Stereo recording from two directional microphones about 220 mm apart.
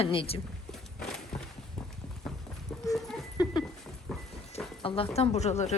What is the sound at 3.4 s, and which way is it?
Dog, 15° left (ahead or behind).